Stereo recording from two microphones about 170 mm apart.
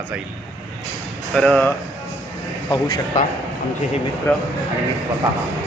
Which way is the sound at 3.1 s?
45° left (ahead or behind).